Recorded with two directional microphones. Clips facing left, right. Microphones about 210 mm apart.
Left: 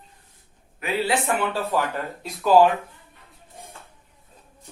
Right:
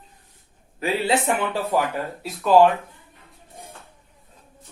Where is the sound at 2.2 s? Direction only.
Centre (ahead or behind).